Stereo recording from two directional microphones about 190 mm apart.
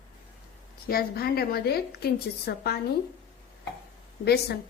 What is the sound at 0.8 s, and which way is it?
A woman's voice, 50° left (ahead or behind).